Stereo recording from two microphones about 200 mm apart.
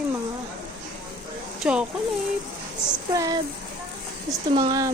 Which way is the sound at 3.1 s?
20° right (ahead or behind).